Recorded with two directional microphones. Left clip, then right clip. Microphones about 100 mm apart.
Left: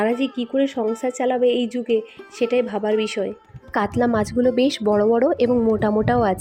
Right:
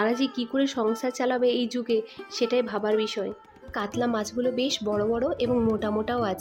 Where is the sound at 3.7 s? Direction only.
60° left (ahead or behind).